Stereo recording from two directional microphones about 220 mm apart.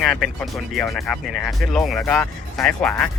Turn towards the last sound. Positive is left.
turn(degrees=0)  # may be behind; listen again after turning